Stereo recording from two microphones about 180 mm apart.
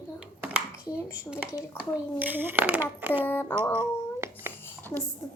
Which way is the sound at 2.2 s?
10° right (ahead or behind).